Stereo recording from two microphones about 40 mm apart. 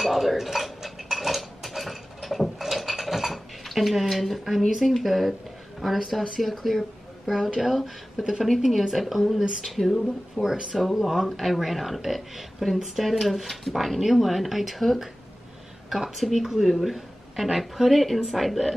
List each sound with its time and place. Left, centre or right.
0.0 s dishes: centre
5.8 s speech: centre